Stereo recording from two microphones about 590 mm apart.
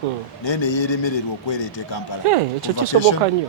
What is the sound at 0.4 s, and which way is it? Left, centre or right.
A man's voice, left.